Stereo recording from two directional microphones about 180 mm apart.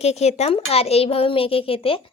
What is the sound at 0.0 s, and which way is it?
A woman's voice, 35° left (ahead or behind).